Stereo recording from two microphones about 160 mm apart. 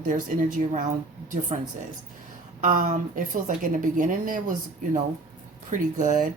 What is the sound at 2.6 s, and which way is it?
A woman's voice, 55° right (ahead or behind).